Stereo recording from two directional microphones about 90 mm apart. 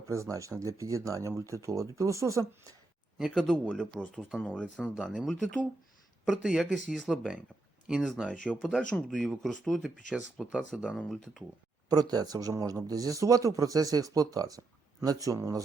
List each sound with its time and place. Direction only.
0.1 s speech: 35° right (ahead or behind)
3.2 s speech: 5° right (ahead or behind)
3.9 s speech: 5° left (ahead or behind)
4.2 s speech: 5° right (ahead or behind)
4.4 s speech: 10° left (ahead or behind)
11.9 s speech: 45° right (ahead or behind)